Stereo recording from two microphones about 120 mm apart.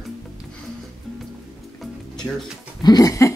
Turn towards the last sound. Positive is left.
turn(degrees=30)  # may be behind; listen again after turning